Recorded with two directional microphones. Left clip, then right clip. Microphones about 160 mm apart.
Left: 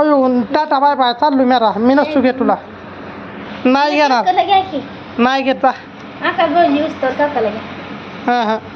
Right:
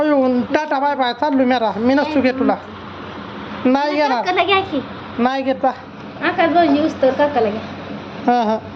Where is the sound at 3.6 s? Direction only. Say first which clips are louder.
Left 4 dB; 5° left (ahead or behind).